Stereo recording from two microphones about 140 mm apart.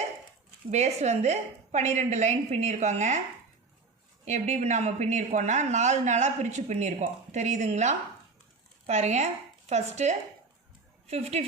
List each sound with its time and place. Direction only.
0.7 s a woman's voice: 50° right (ahead or behind)
4.3 s speech: 60° right (ahead or behind)